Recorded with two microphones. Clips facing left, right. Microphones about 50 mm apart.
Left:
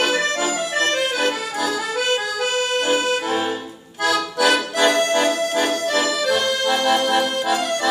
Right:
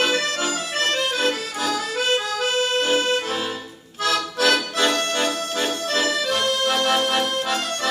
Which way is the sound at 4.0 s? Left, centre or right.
Left.